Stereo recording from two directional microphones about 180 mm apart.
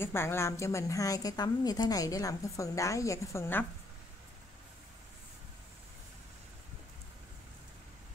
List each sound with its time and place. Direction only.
0.0 s a woman's voice: 15° left (ahead or behind)